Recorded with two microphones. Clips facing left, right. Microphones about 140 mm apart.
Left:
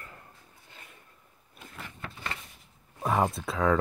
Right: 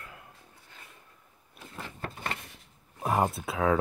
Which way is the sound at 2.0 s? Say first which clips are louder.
Right 3 dB; 45° right (ahead or behind).